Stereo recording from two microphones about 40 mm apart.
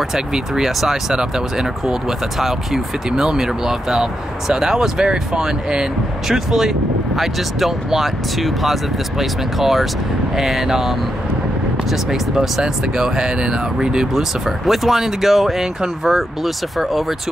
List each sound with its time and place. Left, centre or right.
0.1 s speech: centre
0.7 s speech: centre
1.1 s speech: centre
3.1 s speech: centre
12.1 s speech: centre
14.7 s speech: centre